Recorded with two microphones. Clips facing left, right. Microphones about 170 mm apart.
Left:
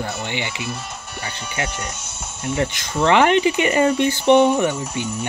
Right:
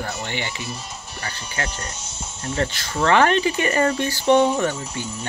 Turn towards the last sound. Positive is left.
turn(degrees=20)  # may be behind; listen again after turning